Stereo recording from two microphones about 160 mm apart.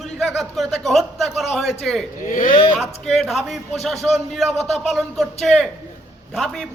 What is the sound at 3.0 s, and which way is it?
A man's voice, centre (ahead or behind).